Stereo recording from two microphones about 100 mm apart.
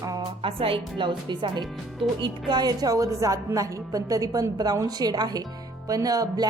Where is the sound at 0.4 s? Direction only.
65° right (ahead or behind).